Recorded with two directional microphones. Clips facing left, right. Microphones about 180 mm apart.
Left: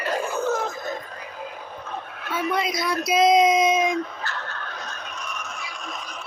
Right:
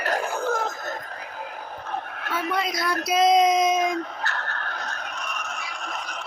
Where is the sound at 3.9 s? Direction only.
50° right (ahead or behind).